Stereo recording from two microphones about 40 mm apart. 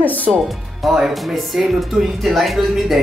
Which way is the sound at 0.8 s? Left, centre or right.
Centre.